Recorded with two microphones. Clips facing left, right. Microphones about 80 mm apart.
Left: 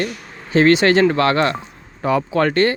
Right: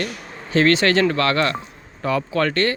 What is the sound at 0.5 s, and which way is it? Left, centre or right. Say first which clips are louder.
Speech: left 3 dB; centre.